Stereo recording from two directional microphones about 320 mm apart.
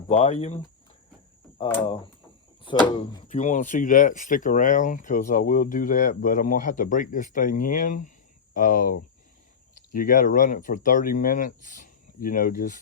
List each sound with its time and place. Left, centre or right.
0.1 s speech: centre
1.7 s speech: centre